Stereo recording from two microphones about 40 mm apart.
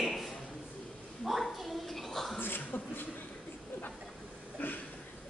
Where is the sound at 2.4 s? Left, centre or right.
Left.